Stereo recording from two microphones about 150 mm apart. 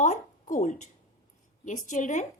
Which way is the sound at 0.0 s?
55° left (ahead or behind).